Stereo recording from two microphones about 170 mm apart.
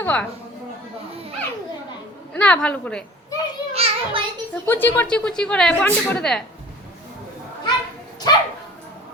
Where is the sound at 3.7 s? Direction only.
35° right (ahead or behind).